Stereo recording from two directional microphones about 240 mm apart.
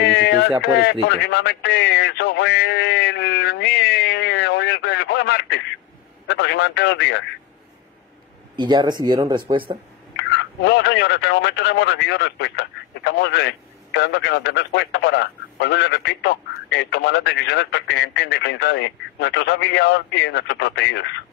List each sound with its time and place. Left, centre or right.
0.0 s a sound: left
1.0 s speech: left
8.5 s speech: centre
10.1 s speech: left